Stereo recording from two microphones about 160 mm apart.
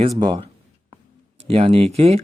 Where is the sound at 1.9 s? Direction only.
40° right (ahead or behind).